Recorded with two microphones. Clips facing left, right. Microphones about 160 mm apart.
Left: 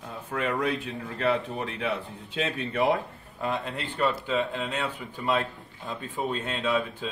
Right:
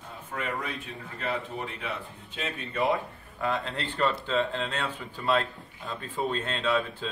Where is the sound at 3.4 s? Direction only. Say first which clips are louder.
Even; 15° left (ahead or behind).